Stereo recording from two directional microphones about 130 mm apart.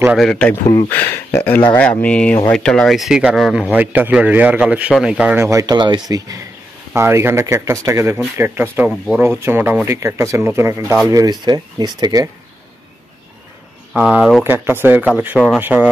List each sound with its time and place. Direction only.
0.2 s speech: 10° left (ahead or behind)
3.7 s speech: 15° right (ahead or behind)
5.4 s speech: 25° right (ahead or behind)
13.9 s speech: 5° right (ahead or behind)
14.4 s speech: 15° right (ahead or behind)